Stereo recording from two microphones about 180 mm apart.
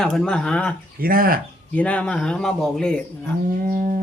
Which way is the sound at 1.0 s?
55° right (ahead or behind).